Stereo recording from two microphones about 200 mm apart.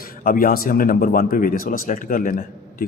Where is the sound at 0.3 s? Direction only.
45° left (ahead or behind).